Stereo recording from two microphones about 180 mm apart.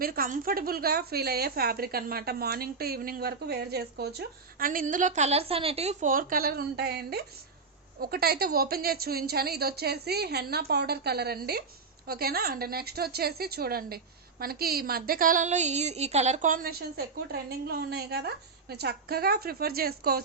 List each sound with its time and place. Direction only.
0.0 s a woman's voice: 55° right (ahead or behind)